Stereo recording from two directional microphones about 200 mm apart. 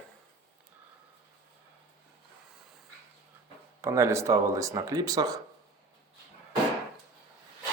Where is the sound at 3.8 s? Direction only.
15° right (ahead or behind).